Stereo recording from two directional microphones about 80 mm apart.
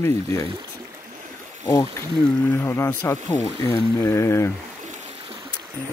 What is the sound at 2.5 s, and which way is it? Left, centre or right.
Speech, left.